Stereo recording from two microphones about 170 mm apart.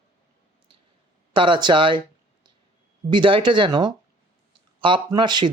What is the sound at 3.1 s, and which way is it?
Speech, 30° right (ahead or behind).